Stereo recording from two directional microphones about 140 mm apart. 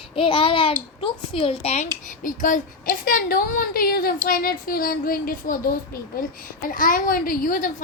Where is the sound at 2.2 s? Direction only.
75° left (ahead or behind).